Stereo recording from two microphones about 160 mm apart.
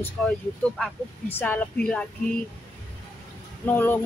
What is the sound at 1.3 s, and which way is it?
Speech, 10° left (ahead or behind).